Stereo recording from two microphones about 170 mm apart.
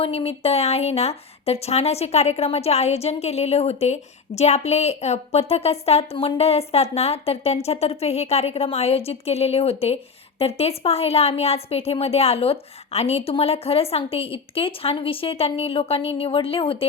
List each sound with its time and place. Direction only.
0.0 s speech: 35° left (ahead or behind)